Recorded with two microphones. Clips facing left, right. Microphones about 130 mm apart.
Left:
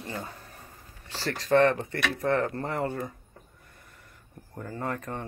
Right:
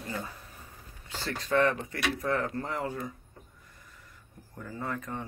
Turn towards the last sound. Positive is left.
turn(degrees=55)  # may be behind; listen again after turning